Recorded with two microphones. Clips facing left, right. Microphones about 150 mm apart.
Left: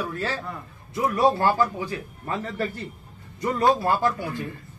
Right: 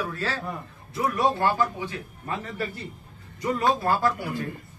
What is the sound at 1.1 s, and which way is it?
Speech, 35° left (ahead or behind).